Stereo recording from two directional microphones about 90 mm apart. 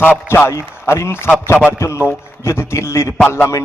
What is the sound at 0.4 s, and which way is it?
A man's voice, 30° left (ahead or behind).